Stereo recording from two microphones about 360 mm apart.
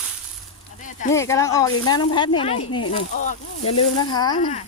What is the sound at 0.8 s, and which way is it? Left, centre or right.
Speech, left.